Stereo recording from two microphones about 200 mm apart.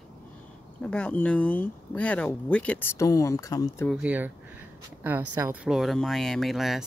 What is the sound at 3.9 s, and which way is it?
Speech, 5° right (ahead or behind).